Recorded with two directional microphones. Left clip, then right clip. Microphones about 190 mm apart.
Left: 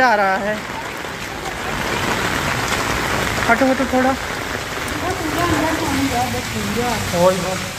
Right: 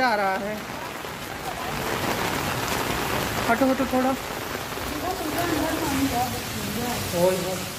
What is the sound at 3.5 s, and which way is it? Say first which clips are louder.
Speech: left 6 dB; 15° right (ahead or behind).